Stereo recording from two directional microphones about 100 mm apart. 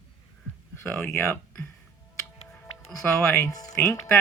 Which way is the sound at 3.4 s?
35° left (ahead or behind).